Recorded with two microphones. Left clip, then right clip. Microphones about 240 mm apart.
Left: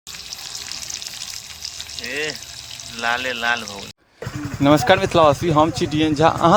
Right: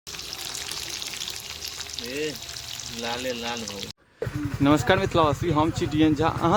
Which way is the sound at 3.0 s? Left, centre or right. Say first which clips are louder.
Left 9 dB; centre.